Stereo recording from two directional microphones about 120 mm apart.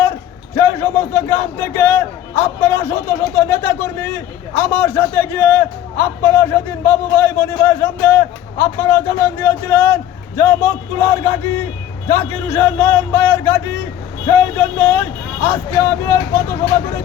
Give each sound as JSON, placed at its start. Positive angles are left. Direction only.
{"t": 0.5, "sound": "a man's voice", "side_deg": 20}
{"t": 4.6, "sound": "a man's voice", "side_deg": 15}